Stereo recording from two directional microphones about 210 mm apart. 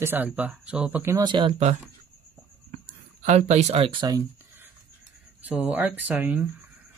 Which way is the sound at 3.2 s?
35° right (ahead or behind).